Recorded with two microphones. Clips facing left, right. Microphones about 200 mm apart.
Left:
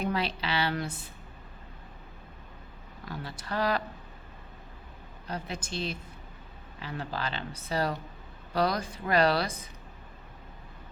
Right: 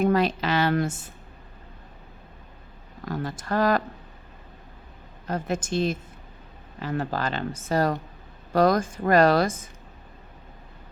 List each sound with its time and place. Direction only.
0.0 s speech: 45° right (ahead or behind)
3.1 s speech: 45° right (ahead or behind)
5.3 s speech: 50° right (ahead or behind)